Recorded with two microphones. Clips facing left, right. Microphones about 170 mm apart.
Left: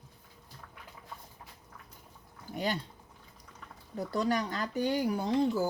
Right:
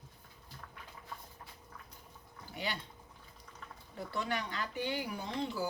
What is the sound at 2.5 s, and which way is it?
Speech, 45° left (ahead or behind).